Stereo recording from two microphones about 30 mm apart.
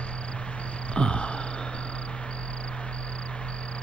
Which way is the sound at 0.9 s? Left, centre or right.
Left.